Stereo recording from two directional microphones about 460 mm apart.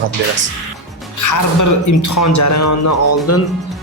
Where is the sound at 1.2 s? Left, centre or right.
Left.